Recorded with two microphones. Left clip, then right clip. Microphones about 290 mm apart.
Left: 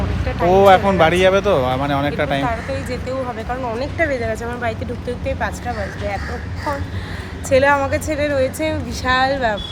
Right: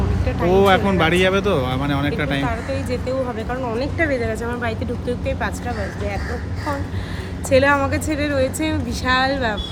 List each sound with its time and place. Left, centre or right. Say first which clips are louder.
0.3 s boat: left 3 dB; centre
0.6 s speech: left 6 dB; centre
7.5 s a woman's voice: left 2 dB; centre